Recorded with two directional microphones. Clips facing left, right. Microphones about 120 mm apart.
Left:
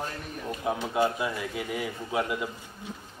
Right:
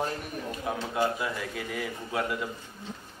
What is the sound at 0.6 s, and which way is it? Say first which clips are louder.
A man's voice: left 3 dB; 20° left (ahead or behind).